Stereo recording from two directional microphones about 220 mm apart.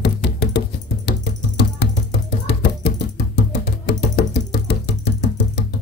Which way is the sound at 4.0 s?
50° left (ahead or behind).